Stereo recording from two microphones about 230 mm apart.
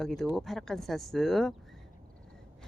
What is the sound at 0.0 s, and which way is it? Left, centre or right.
Speech, centre.